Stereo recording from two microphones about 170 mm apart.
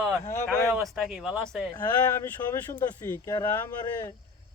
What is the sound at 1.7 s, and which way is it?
Speech, 15° left (ahead or behind).